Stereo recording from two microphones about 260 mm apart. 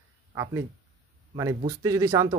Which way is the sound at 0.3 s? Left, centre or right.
Centre.